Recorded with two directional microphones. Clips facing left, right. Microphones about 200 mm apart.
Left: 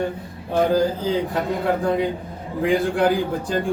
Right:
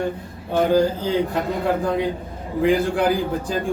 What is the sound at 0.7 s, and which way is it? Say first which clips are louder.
Speech: right 1 dB; centre (ahead or behind).